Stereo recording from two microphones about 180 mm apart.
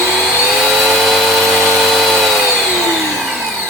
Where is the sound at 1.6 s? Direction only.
Centre (ahead or behind).